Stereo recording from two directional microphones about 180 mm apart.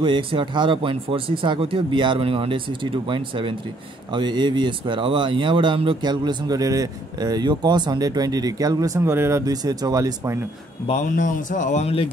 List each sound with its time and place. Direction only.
0.0 s speech: 25° right (ahead or behind)
10.9 s speech: 45° left (ahead or behind)